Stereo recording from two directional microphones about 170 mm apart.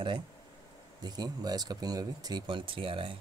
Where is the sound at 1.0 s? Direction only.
25° right (ahead or behind).